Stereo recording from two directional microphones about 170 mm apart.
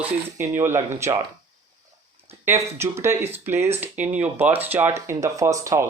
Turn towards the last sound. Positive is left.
turn(degrees=-20)  # may be behind; listen again after turning